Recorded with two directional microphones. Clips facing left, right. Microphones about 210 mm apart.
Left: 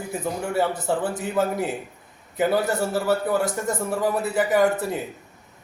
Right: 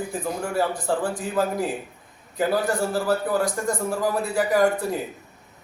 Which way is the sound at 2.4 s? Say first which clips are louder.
Left 1 dB; 5° left (ahead or behind).